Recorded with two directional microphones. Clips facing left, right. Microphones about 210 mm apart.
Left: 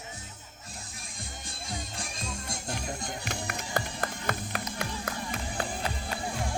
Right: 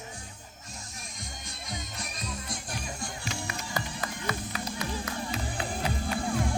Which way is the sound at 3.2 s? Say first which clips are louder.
Even; 55° left (ahead or behind).